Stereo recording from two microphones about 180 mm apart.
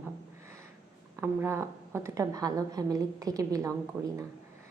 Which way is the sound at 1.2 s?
15° right (ahead or behind).